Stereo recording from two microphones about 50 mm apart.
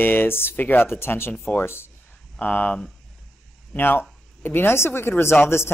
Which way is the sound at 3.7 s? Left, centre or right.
Left.